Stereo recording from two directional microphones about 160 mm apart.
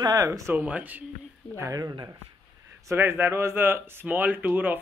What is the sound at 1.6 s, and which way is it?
Speech, 20° right (ahead or behind).